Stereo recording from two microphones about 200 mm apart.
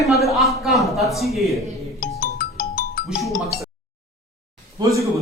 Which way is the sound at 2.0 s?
45° left (ahead or behind).